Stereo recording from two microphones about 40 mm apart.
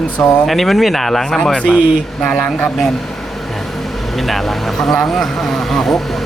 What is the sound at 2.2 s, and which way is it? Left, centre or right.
Speech, centre.